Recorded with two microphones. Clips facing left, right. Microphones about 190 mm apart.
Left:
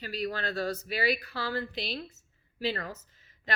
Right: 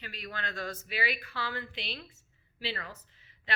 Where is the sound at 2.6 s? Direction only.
45° left (ahead or behind).